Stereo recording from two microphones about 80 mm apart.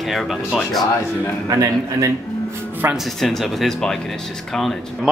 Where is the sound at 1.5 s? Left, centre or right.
Right.